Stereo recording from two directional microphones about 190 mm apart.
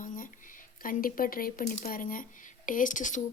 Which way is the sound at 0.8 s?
45° left (ahead or behind).